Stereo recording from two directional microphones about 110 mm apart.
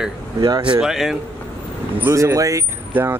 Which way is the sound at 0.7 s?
5° right (ahead or behind).